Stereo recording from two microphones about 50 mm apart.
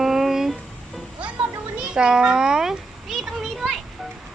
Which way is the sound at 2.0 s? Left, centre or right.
Centre.